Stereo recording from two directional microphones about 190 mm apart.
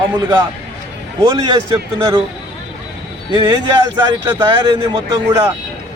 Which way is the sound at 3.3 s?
20° right (ahead or behind).